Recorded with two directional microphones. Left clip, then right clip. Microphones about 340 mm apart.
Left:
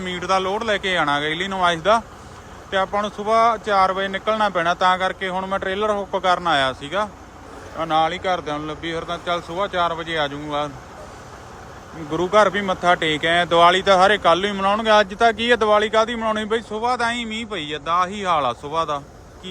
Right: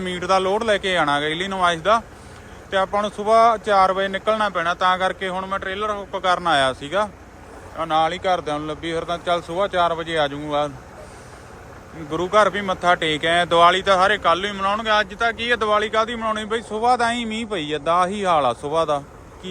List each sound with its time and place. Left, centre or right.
0.0 s speech: centre
12.1 s speech: centre